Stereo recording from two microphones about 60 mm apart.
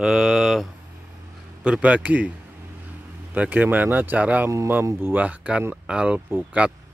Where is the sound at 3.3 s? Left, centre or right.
Right.